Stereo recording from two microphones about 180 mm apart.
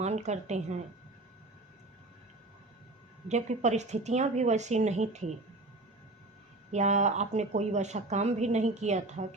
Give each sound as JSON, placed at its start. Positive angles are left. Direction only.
{"t": 0.0, "sound": "a woman's voice", "side_deg": -40}
{"t": 3.2, "sound": "a woman's voice", "side_deg": -40}
{"t": 6.7, "sound": "a woman's voice", "side_deg": -40}